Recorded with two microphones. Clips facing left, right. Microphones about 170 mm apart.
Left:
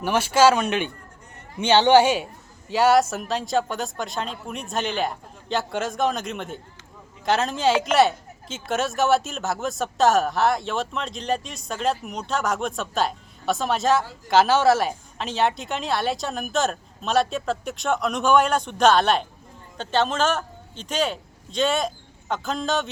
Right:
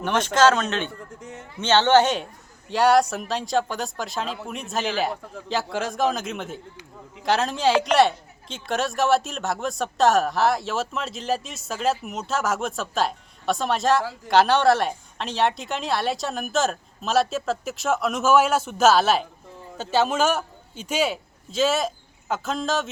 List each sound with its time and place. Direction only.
0.0 s speech: 10° left (ahead or behind)
1.2 s a sound: 90° right
1.5 s a woman's voice: 15° left (ahead or behind)